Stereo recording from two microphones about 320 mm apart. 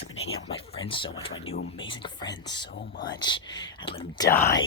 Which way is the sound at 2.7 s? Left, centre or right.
Left.